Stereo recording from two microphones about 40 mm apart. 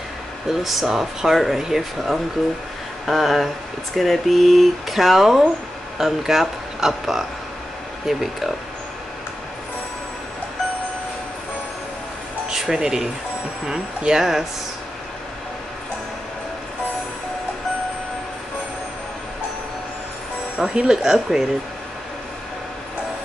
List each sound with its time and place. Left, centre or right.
0.5 s speech: centre
12.4 s speech: centre
20.5 s speech: right